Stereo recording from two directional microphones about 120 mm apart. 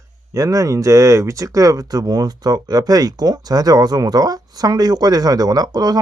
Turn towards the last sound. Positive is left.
turn(degrees=-35)  # may be behind; listen again after turning